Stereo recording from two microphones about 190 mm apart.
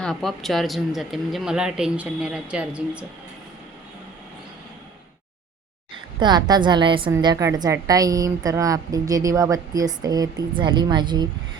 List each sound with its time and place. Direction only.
0.0 s speech: centre (ahead or behind)
6.1 s a woman's voice: 20° right (ahead or behind)